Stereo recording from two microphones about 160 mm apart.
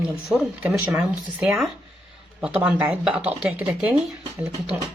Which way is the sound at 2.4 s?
10° right (ahead or behind).